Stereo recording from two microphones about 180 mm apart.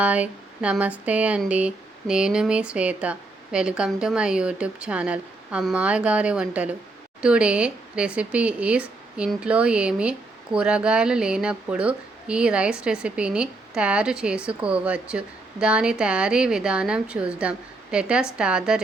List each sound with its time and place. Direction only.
0.0 s speech: 10° right (ahead or behind)